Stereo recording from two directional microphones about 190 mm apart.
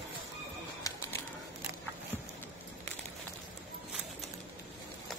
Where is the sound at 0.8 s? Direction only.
20° left (ahead or behind).